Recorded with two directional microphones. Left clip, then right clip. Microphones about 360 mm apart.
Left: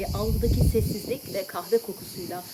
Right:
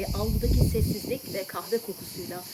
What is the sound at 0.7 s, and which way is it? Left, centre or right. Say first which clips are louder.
Speech: left 3 dB; centre.